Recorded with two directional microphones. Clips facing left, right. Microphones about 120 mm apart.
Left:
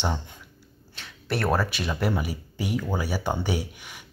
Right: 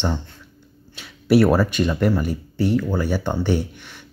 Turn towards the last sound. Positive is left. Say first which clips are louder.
# right 5 dB
turn(degrees=10)  # may be behind; listen again after turning